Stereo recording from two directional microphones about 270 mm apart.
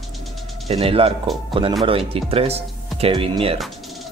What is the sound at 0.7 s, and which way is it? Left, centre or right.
Speech, right.